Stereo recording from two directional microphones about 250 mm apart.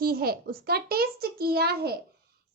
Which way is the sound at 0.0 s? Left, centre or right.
Right.